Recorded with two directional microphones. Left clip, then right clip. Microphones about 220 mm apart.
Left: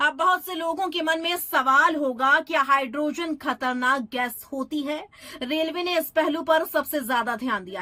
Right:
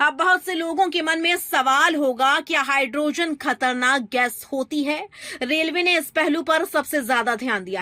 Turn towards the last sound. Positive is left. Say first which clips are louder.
# right 4 dB
turn(degrees=-25)  # may be behind; listen again after turning